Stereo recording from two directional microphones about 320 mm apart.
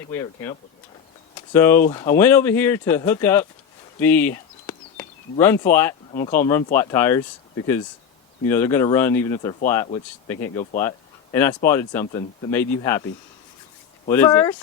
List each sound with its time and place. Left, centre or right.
0.1 s speech: centre
1.5 s speech: centre
4.0 s a sound: centre
6.2 s speech: left
6.7 s speech: centre
8.4 s speech: centre
14.1 s speech: centre